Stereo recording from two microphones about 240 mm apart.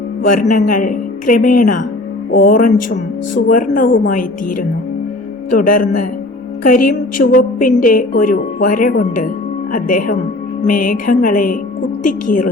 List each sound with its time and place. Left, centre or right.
0.4 s a woman's voice: left
6.7 s a woman's voice: left